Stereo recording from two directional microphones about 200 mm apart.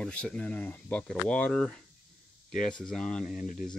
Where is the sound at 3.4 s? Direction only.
45° left (ahead or behind).